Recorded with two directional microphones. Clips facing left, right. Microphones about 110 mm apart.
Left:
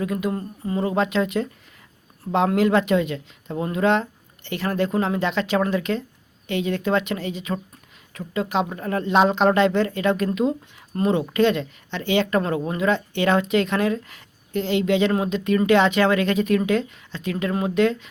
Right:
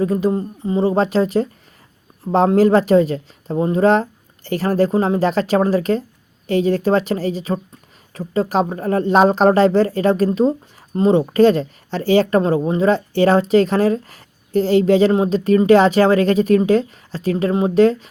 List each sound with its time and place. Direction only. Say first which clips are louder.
0.0 s speech: right 7 dB; 35° right (ahead or behind)